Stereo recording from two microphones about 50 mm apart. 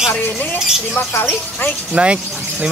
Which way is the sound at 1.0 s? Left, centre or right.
Left.